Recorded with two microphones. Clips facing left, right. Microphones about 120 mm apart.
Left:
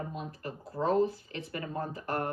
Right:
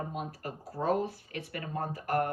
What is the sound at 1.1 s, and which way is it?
Speech, 60° right (ahead or behind).